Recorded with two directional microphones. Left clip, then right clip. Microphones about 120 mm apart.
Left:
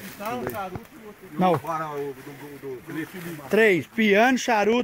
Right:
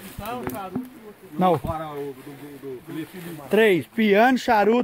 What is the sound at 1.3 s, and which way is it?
Speech, 20° right (ahead or behind).